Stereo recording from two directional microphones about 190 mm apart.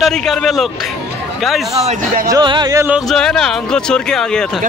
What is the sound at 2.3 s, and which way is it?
Music, 25° right (ahead or behind).